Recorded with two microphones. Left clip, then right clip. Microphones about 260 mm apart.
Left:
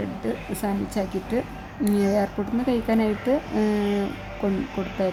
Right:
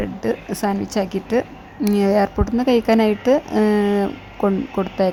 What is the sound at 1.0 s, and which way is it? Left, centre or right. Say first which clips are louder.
Speech: right 7 dB; right.